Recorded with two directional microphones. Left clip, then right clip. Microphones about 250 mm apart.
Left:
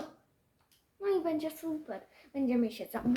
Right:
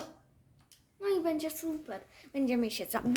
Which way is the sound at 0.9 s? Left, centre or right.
Right.